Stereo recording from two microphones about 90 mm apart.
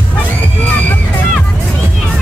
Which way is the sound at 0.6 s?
15° left (ahead or behind).